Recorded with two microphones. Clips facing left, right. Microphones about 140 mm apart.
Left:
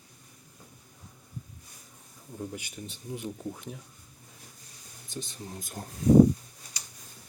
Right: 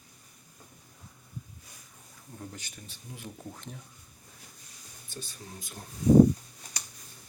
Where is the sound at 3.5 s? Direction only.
5° left (ahead or behind).